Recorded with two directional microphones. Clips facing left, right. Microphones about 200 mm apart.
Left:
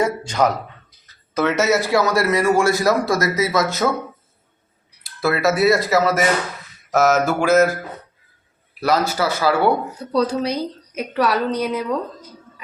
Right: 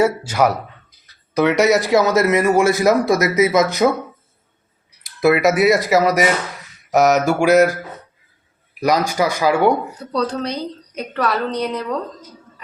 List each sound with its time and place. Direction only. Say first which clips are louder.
0.0 s speech: right 3 dB; 10° right (ahead or behind)
5.0 s speech: right 4 dB; 20° right (ahead or behind)
8.8 s speech: right 2 dB; 15° right (ahead or behind)
10.1 s a woman's voice: left 2 dB; 10° left (ahead or behind)